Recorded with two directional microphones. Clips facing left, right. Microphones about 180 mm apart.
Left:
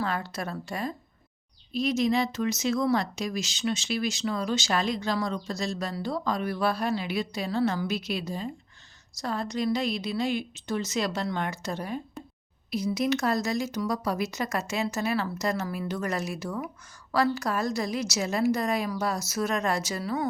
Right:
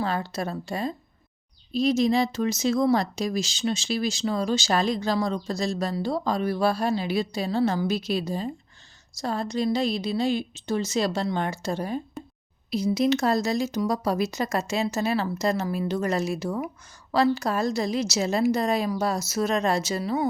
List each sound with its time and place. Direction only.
0.0 s speech: 30° right (ahead or behind)
12.2 s a sound: centre (ahead or behind)
12.7 s speech: 30° right (ahead or behind)